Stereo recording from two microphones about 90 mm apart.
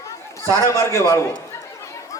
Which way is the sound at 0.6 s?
35° left (ahead or behind).